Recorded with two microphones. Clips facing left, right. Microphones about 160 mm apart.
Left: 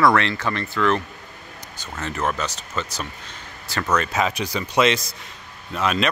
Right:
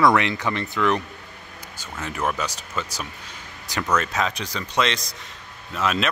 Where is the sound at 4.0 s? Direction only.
5° left (ahead or behind).